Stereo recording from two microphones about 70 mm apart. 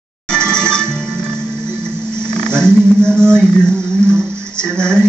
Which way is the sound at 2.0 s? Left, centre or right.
Centre.